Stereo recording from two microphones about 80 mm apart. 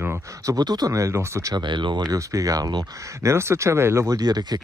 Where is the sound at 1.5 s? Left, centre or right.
Right.